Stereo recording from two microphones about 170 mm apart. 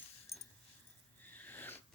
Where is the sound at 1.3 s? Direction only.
10° left (ahead or behind).